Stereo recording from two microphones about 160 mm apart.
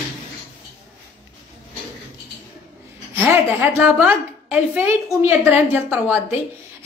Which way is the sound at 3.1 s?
15° right (ahead or behind).